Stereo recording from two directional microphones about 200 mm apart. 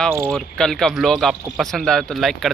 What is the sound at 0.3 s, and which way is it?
Speech, 5° left (ahead or behind).